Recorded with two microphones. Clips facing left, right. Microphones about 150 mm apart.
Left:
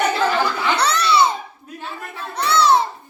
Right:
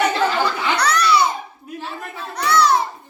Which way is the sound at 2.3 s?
25° left (ahead or behind).